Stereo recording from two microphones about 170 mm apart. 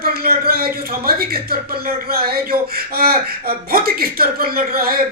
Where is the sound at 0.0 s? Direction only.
60° right (ahead or behind).